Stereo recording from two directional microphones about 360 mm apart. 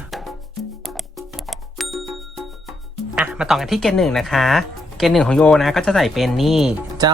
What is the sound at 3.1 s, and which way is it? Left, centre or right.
Speech, centre.